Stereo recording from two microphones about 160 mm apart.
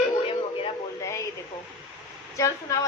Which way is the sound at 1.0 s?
20° left (ahead or behind).